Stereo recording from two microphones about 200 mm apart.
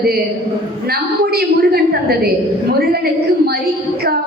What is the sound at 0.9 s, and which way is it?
A woman's voice, 50° right (ahead or behind).